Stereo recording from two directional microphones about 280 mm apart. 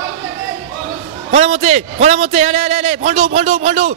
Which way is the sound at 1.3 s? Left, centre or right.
Right.